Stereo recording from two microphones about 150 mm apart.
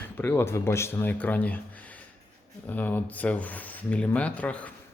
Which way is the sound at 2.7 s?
10° left (ahead or behind).